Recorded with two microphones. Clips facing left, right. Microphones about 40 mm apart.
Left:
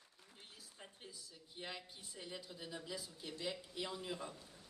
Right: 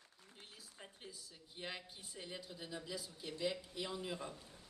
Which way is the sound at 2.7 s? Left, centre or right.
Centre.